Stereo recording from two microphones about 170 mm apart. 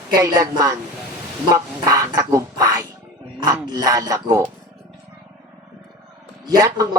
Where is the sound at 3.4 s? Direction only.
20° right (ahead or behind).